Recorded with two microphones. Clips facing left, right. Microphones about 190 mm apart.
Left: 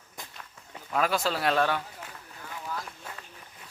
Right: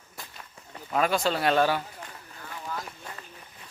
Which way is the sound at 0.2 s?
15° left (ahead or behind).